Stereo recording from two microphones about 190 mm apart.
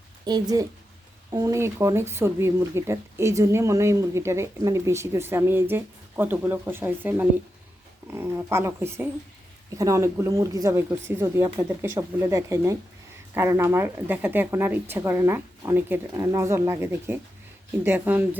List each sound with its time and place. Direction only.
0.3 s a woman's voice: 20° right (ahead or behind)